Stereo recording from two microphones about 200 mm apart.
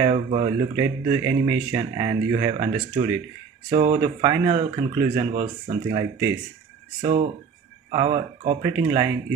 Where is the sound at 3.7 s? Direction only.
35° right (ahead or behind).